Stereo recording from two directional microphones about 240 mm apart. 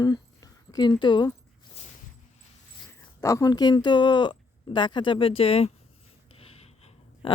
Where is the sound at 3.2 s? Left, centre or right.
Centre.